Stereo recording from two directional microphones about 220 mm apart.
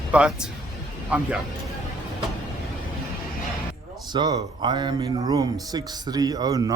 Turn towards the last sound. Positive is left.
turn(degrees=-15)  # may be behind; listen again after turning